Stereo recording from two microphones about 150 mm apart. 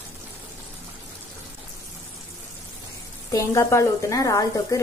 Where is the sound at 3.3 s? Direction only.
20° left (ahead or behind).